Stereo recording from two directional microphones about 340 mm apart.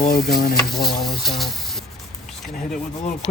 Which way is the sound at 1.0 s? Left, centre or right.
Centre.